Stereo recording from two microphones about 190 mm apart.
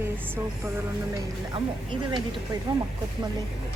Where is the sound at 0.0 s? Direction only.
10° right (ahead or behind).